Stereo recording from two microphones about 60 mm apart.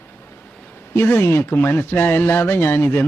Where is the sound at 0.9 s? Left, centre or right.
Left.